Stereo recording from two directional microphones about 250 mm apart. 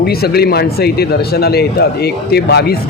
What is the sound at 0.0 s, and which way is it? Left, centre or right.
Speech, left.